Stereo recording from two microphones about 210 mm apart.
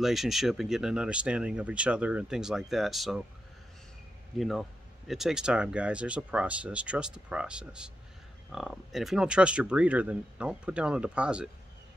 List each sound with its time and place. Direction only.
0.0 s speech: centre (ahead or behind)
4.4 s speech: centre (ahead or behind)